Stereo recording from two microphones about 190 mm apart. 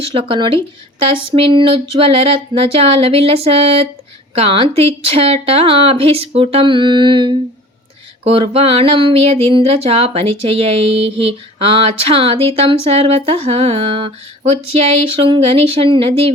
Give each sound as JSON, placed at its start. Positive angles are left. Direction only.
{"t": 0.0, "sound": "speech", "side_deg": -30}